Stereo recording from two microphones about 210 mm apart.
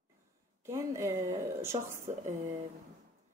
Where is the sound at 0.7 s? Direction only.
15° right (ahead or behind).